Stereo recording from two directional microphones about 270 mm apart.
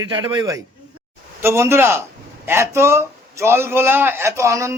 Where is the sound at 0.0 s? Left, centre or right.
Centre.